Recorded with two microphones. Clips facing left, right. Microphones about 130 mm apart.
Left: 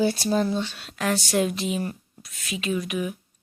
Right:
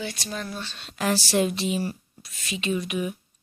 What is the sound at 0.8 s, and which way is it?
Speech, centre (ahead or behind).